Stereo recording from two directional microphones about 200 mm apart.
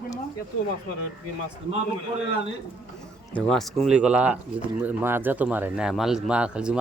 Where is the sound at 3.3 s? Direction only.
5° left (ahead or behind).